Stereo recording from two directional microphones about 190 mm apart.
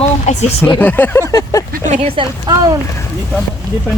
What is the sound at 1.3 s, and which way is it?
Vehicle, 20° left (ahead or behind).